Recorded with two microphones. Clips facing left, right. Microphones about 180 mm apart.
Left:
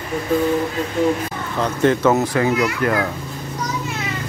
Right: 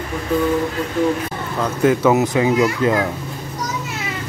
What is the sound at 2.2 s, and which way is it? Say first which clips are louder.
Speech: right 2 dB; 20° right (ahead or behind).